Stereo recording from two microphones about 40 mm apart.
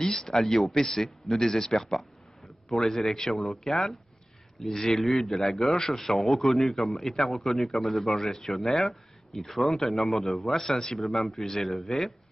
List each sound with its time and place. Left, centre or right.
0.0 s a man's voice: centre